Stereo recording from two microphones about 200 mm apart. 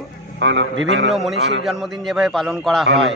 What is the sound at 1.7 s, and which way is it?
A man's voice, centre (ahead or behind).